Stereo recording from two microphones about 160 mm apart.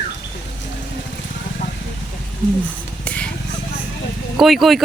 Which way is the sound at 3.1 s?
10° left (ahead or behind).